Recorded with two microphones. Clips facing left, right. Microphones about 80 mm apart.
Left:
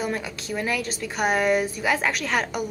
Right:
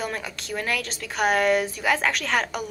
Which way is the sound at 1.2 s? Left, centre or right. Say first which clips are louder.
Right 1 dB; centre.